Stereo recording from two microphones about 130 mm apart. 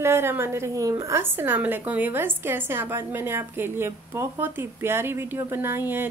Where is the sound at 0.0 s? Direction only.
20° right (ahead or behind).